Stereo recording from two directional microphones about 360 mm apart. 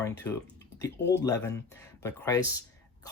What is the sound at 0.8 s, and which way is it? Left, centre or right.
Speech, left.